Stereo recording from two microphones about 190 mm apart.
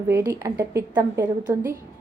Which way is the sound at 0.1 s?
15° right (ahead or behind).